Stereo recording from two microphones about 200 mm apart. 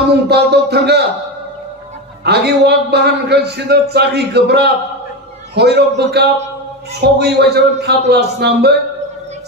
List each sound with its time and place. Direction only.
0.3 s a man's voice: 55° right (ahead or behind)
2.2 s a man's voice: 55° right (ahead or behind)